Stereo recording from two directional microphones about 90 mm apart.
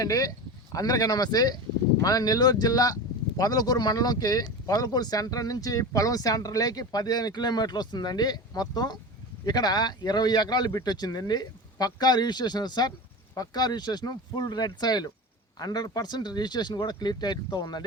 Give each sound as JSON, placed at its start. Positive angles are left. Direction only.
{"t": 0.0, "sound": "speech", "side_deg": 45}